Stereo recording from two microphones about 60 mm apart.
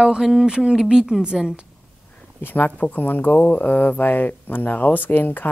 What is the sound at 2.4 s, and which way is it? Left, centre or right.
Speech, left.